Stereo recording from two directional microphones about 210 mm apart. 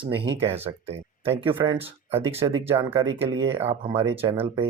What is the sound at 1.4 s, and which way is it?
Speech, 25° right (ahead or behind).